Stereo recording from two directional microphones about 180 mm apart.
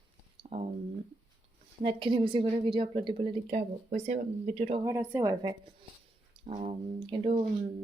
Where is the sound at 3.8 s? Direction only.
40° right (ahead or behind).